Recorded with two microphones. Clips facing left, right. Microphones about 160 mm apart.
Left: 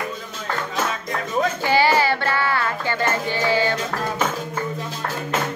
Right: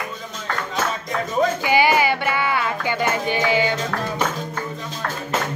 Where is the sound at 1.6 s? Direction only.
15° right (ahead or behind).